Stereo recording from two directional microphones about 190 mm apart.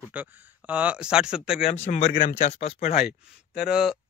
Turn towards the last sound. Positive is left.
turn(degrees=-5)  # may be behind; listen again after turning